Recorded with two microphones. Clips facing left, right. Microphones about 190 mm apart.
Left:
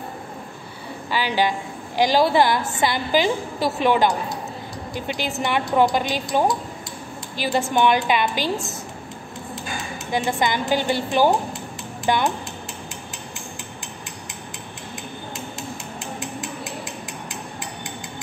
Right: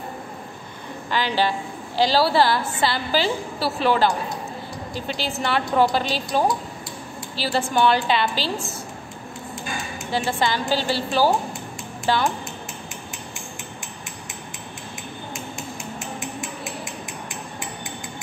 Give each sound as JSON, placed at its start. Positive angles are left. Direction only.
{"t": 1.1, "sound": "a woman's voice", "side_deg": 15}
{"t": 10.1, "sound": "a woman's voice", "side_deg": 15}